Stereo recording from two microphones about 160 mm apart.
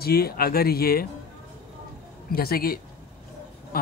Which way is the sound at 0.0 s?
75° left (ahead or behind).